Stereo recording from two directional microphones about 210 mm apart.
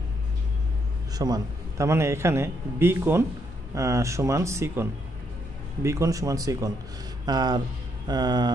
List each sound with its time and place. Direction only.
1.1 s a man's voice: 20° right (ahead or behind)